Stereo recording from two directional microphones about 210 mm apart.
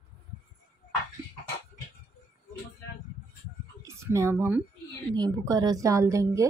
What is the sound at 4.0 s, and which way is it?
A woman's voice, 15° right (ahead or behind).